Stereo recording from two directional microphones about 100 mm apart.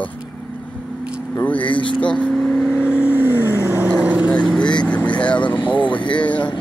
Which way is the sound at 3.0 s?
20° right (ahead or behind).